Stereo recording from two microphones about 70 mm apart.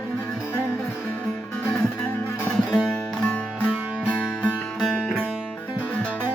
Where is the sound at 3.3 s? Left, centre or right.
Centre.